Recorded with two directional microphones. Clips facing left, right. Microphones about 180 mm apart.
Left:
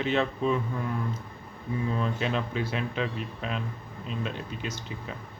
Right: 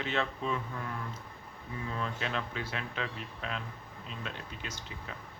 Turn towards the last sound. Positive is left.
turn(degrees=20)  # may be behind; listen again after turning